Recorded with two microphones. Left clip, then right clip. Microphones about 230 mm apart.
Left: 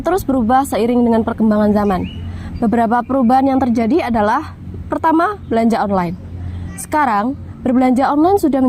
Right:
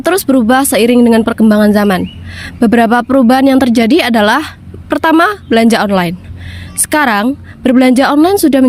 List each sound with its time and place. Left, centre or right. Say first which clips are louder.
0.0 s speech: right 6 dB; right